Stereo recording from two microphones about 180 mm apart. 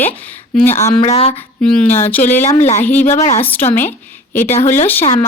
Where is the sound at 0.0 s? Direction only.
10° left (ahead or behind).